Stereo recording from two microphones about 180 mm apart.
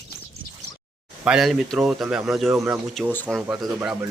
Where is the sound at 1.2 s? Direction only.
5° right (ahead or behind).